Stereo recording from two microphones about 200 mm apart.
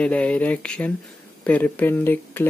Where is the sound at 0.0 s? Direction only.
5° left (ahead or behind).